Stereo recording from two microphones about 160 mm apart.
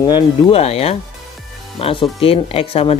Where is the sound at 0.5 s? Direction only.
40° left (ahead or behind).